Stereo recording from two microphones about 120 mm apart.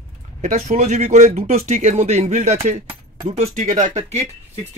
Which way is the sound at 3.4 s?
90° right.